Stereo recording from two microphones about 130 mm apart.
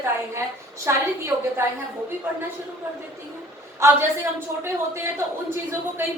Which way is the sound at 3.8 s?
20° right (ahead or behind).